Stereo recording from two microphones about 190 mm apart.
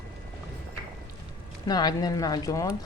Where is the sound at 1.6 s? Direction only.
20° left (ahead or behind).